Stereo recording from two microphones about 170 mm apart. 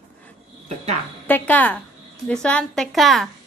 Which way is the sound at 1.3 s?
10° left (ahead or behind).